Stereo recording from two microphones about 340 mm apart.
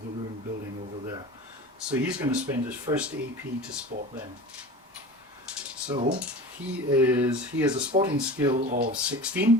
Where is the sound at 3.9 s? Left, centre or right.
Right.